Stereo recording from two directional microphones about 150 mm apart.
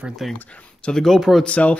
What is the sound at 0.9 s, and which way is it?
Speech, 5° left (ahead or behind).